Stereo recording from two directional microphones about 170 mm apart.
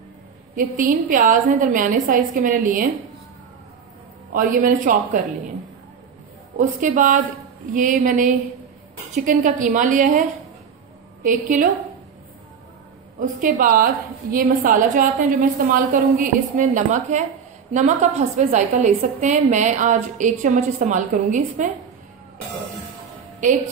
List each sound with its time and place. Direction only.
0.6 s a woman's voice: 55° right (ahead or behind)
4.3 s a woman's voice: 55° right (ahead or behind)
6.6 s a woman's voice: 50° right (ahead or behind)
11.2 s a woman's voice: 50° right (ahead or behind)
13.2 s a woman's voice: 50° right (ahead or behind)